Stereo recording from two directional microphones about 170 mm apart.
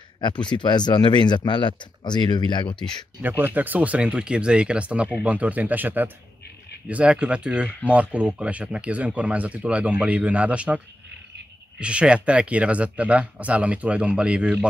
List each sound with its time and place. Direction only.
0.2 s speech: 25° left (ahead or behind)
3.2 s speech: 10° right (ahead or behind)
11.8 s speech: 5° right (ahead or behind)